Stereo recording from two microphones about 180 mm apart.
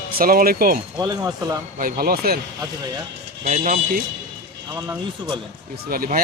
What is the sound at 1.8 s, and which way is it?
Speech, 50° right (ahead or behind).